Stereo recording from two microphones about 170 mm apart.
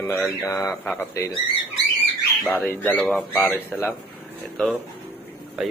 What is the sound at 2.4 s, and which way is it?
Speech, 5° left (ahead or behind).